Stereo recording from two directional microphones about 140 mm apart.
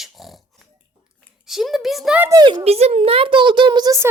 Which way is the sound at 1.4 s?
Centre (ahead or behind).